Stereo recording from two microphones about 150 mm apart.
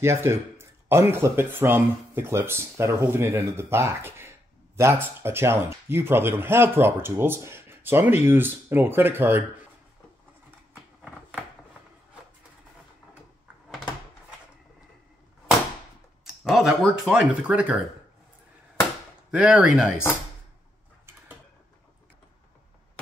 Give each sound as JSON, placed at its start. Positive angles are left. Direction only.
{"t": 0.0, "sound": "speech", "side_deg": -20}
{"t": 16.4, "sound": "speech", "side_deg": 0}
{"t": 19.3, "sound": "speech", "side_deg": -10}